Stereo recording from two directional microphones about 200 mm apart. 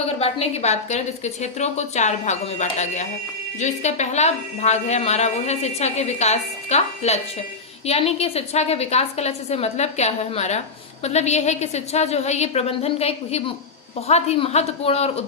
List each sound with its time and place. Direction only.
0.2 s a woman's voice: 30° left (ahead or behind)